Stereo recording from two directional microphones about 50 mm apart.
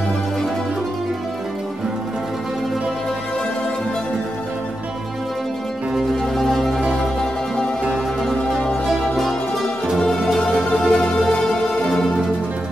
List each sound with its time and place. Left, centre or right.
6.3 s music: centre
7.9 s music: centre
10.3 s music: centre